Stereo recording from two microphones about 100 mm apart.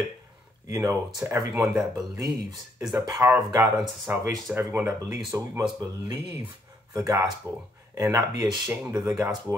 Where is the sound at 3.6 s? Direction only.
5° right (ahead or behind).